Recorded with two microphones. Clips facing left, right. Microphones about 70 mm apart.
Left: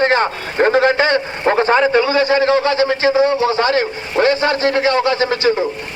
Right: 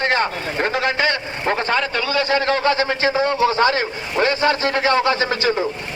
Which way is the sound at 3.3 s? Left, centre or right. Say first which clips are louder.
Left 1 dB; left.